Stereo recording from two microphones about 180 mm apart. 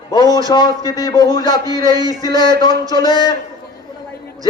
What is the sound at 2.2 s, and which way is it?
A man's voice, 25° left (ahead or behind).